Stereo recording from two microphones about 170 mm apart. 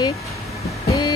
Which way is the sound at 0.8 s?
25° left (ahead or behind).